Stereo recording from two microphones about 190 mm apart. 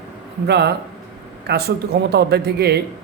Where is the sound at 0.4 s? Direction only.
65° right (ahead or behind).